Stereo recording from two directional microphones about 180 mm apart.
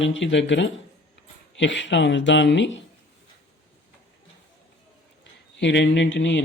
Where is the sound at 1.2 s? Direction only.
90° left.